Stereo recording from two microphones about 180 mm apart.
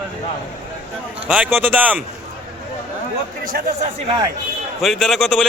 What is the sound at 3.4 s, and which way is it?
Speech, 50° right (ahead or behind).